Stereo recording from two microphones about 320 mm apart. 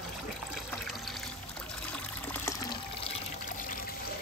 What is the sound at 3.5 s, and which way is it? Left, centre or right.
Trickle, left.